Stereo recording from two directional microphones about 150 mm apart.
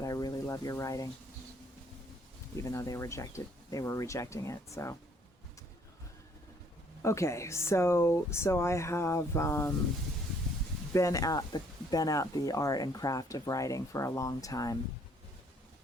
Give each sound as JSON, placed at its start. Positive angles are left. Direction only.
{"t": 0.0, "sound": "a sound", "side_deg": 25}
{"t": 2.6, "sound": "speech", "side_deg": 20}
{"t": 7.0, "sound": "speech", "side_deg": 20}
{"t": 10.9, "sound": "speech", "side_deg": 20}